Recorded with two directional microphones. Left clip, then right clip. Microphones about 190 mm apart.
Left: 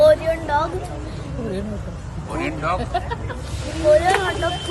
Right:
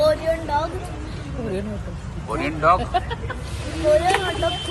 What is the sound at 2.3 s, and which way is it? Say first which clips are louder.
Speech: right 5 dB; 5° left (ahead or behind).